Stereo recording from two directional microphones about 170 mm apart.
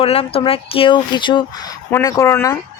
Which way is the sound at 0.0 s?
35° left (ahead or behind).